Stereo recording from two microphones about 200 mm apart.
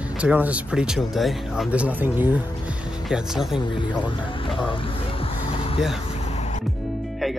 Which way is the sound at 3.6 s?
25° left (ahead or behind).